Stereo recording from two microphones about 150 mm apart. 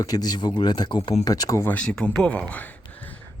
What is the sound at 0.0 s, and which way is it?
Speech, 25° left (ahead or behind).